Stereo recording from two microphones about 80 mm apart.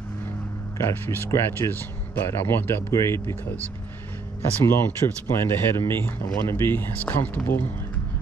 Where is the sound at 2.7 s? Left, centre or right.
Left.